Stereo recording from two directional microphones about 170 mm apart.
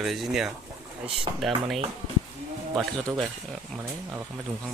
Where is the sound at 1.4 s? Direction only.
Centre (ahead or behind).